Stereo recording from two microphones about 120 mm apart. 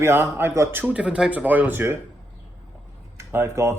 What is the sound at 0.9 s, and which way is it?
Speech, 10° right (ahead or behind).